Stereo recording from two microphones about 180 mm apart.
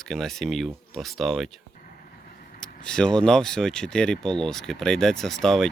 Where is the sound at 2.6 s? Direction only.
5° left (ahead or behind).